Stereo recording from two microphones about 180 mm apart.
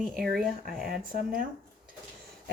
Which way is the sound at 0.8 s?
55° right (ahead or behind).